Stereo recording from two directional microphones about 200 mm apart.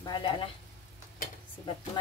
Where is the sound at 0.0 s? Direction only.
25° left (ahead or behind).